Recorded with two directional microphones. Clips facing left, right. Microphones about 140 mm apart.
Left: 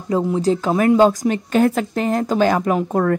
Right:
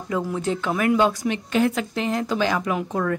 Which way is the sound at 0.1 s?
30° left (ahead or behind).